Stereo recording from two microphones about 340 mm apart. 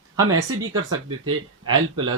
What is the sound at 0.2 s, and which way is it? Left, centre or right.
Speech, right.